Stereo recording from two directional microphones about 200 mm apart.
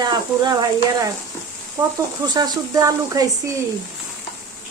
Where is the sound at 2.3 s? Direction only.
20° right (ahead or behind).